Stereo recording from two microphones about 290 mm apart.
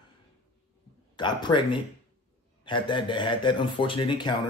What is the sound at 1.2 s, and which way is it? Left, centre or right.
Speech, centre.